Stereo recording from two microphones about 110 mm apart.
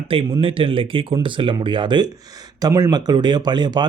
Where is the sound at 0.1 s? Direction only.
55° right (ahead or behind).